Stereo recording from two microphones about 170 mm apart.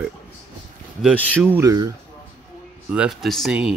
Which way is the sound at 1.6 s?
20° right (ahead or behind).